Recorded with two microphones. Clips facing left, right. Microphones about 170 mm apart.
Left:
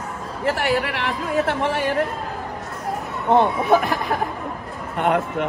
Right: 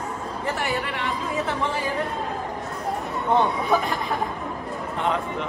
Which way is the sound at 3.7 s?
70° left (ahead or behind).